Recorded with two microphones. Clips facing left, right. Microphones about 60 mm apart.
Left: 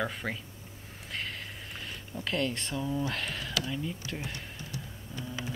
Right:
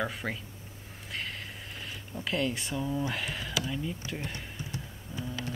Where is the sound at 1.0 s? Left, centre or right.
Centre.